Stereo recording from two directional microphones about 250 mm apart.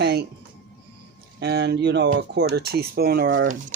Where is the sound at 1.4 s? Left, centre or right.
Right.